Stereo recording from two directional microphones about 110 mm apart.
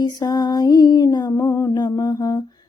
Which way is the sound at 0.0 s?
35° left (ahead or behind).